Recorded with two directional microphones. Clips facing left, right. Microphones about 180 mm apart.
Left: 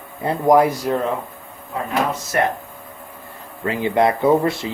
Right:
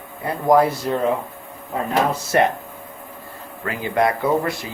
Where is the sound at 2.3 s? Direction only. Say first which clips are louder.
Right 3 dB; 25° right (ahead or behind).